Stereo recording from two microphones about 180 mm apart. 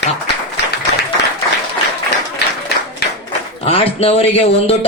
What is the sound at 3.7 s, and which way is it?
Speech, 30° left (ahead or behind).